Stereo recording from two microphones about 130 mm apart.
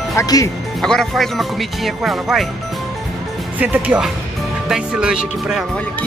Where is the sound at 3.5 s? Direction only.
10° right (ahead or behind).